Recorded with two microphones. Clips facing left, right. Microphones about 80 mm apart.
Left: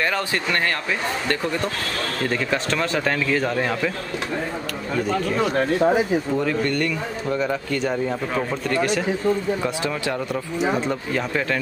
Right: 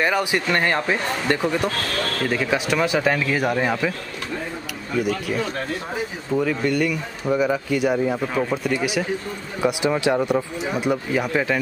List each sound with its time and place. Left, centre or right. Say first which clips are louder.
0.0 s speech: right 2 dB; centre
6.3 s speech: right 1 dB; centre